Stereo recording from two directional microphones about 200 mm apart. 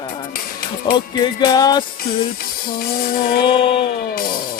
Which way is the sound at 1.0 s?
20° left (ahead or behind).